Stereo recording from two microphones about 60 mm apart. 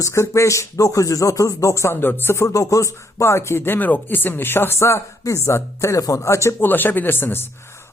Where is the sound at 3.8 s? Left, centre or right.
Left.